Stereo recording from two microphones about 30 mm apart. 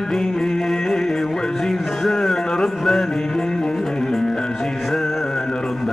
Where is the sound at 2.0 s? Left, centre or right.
Centre.